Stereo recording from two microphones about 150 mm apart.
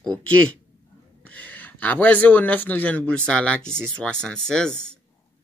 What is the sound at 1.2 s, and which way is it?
Speech, 10° left (ahead or behind).